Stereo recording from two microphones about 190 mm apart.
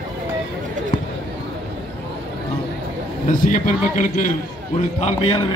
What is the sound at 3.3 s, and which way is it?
A man's voice, 40° left (ahead or behind).